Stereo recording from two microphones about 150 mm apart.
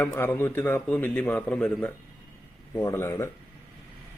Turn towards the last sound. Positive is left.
turn(degrees=20)  # may be behind; listen again after turning